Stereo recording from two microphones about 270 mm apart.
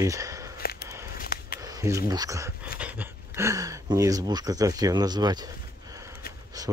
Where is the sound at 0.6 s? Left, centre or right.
Left.